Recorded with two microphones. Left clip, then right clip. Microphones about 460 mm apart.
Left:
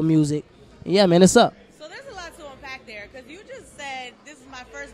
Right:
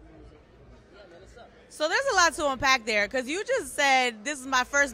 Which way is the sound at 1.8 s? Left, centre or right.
Right.